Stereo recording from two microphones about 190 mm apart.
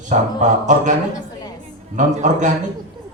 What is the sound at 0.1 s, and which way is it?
Speech, 40° right (ahead or behind).